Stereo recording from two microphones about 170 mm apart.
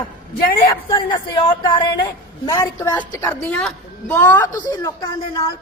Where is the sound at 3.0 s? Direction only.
10° left (ahead or behind).